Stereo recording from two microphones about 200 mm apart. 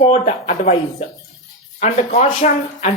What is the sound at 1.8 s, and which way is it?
Speech, 35° left (ahead or behind).